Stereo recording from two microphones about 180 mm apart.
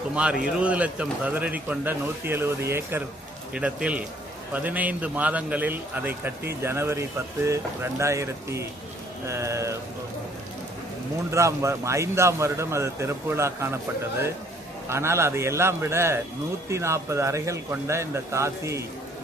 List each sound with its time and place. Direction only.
0.2 s a man's voice: 5° right (ahead or behind)
11.3 s a man's voice: 15° right (ahead or behind)
14.8 s a man's voice: 15° right (ahead or behind)